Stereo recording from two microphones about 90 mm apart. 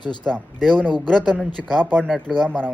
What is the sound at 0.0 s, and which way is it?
Speech, 55° left (ahead or behind).